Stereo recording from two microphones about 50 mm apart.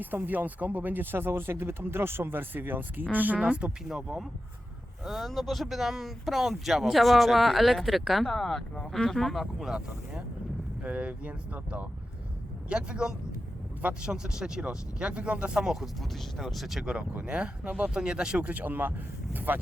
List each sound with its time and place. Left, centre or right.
0.0 s speech: right
3.4 s speech: right
3.8 s speech: centre
10.8 s speech: right
12.6 s speech: right
16.0 s speech: centre
17.2 s speech: right